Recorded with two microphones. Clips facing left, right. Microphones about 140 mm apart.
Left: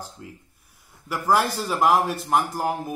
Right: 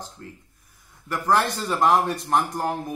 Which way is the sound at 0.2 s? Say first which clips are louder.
Even; 10° left (ahead or behind).